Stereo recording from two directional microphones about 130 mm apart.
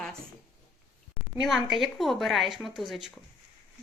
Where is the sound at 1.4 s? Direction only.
Centre (ahead or behind).